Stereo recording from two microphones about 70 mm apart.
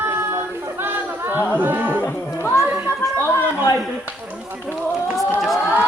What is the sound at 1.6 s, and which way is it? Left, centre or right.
Music, right.